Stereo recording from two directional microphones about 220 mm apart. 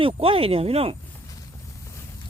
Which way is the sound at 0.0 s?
25° right (ahead or behind).